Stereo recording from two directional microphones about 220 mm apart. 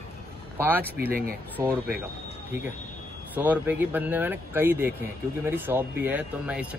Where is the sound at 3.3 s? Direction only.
5° right (ahead or behind).